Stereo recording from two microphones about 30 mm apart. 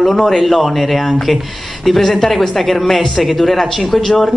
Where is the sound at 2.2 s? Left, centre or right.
Centre.